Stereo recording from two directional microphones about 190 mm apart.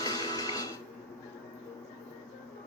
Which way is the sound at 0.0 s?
20° left (ahead or behind).